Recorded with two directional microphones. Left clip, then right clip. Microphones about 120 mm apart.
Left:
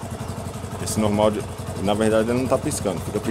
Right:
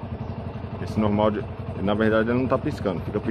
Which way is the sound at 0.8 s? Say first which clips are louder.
Left 3 dB; 30° left (ahead or behind).